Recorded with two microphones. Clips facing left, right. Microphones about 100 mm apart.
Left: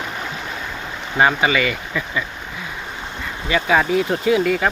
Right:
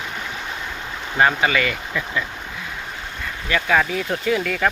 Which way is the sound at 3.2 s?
10° left (ahead or behind).